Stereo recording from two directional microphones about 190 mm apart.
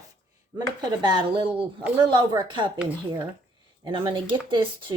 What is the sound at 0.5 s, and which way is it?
Speech, 20° right (ahead or behind).